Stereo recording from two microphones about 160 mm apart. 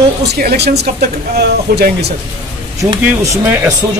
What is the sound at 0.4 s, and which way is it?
Speech, 75° right (ahead or behind).